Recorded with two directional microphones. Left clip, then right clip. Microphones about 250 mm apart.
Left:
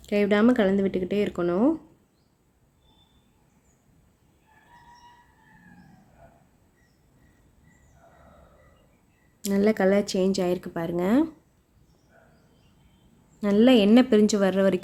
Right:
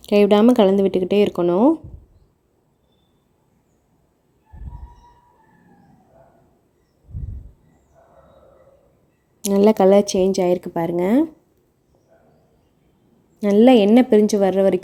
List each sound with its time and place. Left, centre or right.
0.2 s speech: centre
9.4 s a woman's voice: centre
13.4 s a woman's voice: centre